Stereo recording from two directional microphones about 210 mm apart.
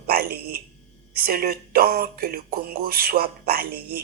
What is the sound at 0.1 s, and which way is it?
Speech, 45° right (ahead or behind).